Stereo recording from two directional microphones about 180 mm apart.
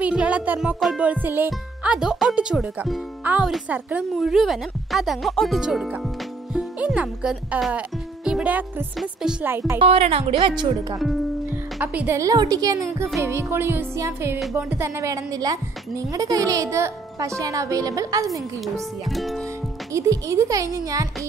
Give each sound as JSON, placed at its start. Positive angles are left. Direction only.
{"t": 0.0, "sound": "music", "side_deg": -5}
{"t": 6.5, "sound": "speech", "side_deg": -5}
{"t": 9.8, "sound": "speech", "side_deg": -35}
{"t": 11.8, "sound": "a woman's voice", "side_deg": -10}
{"t": 19.0, "sound": "music", "side_deg": 0}
{"t": 19.9, "sound": "speech", "side_deg": -15}